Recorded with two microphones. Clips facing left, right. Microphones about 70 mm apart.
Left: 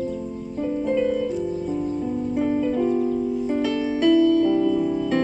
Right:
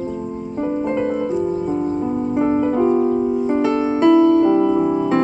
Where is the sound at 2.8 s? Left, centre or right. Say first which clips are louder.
Right 6 dB; right.